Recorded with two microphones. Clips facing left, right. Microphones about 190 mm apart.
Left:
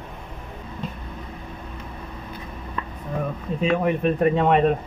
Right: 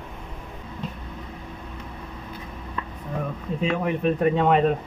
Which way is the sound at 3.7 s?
55° left (ahead or behind).